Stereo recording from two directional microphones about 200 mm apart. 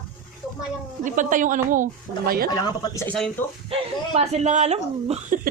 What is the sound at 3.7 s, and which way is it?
Speech, 30° right (ahead or behind).